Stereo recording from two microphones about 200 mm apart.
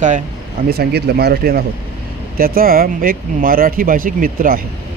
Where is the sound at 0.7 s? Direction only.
50° right (ahead or behind).